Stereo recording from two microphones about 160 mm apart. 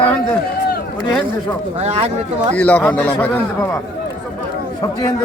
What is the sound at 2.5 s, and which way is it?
A man's voice, 10° left (ahead or behind).